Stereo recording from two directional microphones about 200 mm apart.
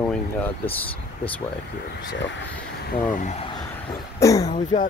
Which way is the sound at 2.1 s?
65° left (ahead or behind).